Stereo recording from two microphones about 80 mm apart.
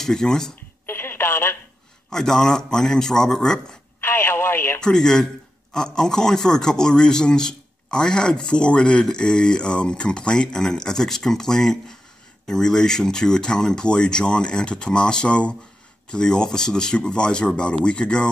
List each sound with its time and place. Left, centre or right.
0.0 s a man's voice: centre
0.8 s telephone: left
2.0 s a man's voice: centre
4.0 s radio: left
4.7 s a man's voice: centre